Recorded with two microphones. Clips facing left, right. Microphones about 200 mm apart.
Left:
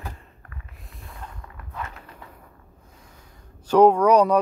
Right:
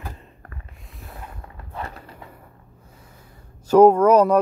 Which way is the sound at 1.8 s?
30° right (ahead or behind).